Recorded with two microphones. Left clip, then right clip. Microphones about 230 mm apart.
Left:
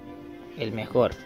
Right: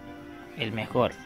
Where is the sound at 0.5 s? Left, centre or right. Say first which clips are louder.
Left 3 dB; centre.